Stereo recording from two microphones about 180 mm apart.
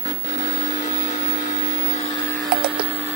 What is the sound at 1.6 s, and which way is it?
Vehicle, 40° left (ahead or behind).